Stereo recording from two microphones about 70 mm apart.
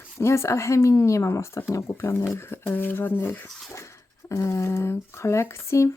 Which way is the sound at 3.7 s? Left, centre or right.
Left.